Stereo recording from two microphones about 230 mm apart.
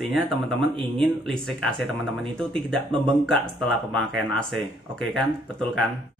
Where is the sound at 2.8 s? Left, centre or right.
Right.